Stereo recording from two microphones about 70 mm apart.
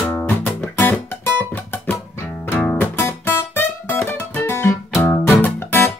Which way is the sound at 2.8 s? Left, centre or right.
Left.